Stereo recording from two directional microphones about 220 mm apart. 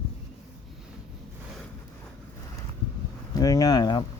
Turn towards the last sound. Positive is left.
turn(degrees=20)  # may be behind; listen again after turning